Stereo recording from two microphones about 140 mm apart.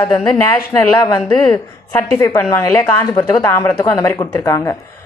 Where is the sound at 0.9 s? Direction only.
25° left (ahead or behind).